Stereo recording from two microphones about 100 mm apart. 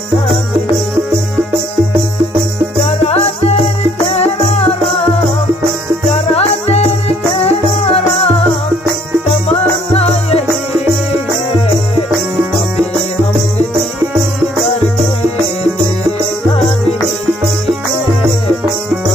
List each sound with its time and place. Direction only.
3.0 s music: 90° left
6.1 s music: 90° left
9.5 s music: 90° left